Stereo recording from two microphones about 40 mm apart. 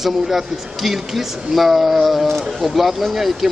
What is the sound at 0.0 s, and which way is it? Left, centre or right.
Speech, centre.